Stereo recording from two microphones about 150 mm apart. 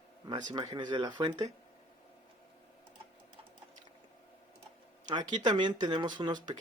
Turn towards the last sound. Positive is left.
turn(degrees=-30)  # may be behind; listen again after turning